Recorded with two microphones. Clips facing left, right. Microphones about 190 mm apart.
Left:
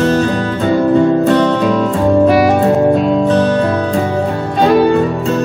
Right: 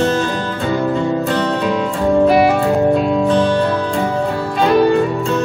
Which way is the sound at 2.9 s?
45° left (ahead or behind).